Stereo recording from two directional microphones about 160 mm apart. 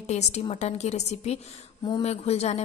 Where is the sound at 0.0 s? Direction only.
45° left (ahead or behind).